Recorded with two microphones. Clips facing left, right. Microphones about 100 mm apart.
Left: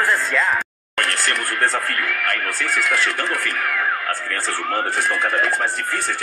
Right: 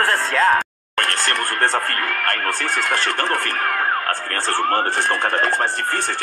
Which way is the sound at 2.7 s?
25° right (ahead or behind).